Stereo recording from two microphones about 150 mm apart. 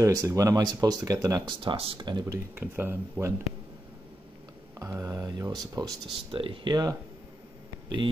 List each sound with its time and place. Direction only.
0.0 s speech: 25° right (ahead or behind)
2.5 s speech: 15° right (ahead or behind)
4.7 s speech: 20° right (ahead or behind)
6.3 s speech: 35° right (ahead or behind)